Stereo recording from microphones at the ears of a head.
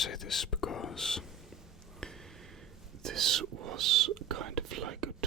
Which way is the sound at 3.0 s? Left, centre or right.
Right.